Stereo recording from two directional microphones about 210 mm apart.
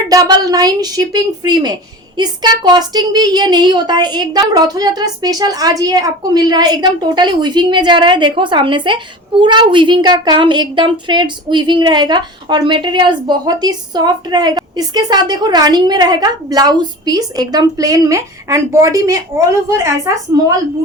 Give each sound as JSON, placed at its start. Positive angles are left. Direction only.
{"t": 0.1, "sound": "a woman's voice", "side_deg": -15}